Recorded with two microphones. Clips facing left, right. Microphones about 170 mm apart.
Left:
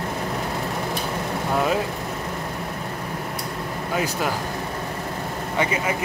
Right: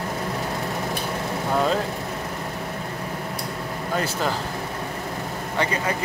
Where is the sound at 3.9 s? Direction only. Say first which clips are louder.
Even; 10° left (ahead or behind).